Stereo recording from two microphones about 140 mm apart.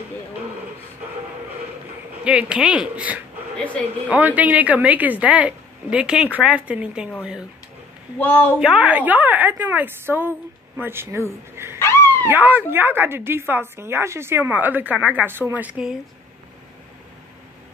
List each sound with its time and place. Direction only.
2.2 s speech: 5° right (ahead or behind)
8.2 s a woman's voice: 10° left (ahead or behind)
8.5 s speech: 5° right (ahead or behind)
11.8 s dog: 15° left (ahead or behind)
12.3 s speech: 10° right (ahead or behind)